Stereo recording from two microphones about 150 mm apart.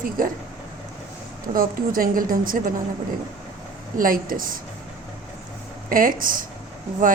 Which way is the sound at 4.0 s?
70° right (ahead or behind).